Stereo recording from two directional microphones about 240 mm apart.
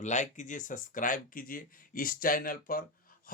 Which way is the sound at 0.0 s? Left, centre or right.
Left.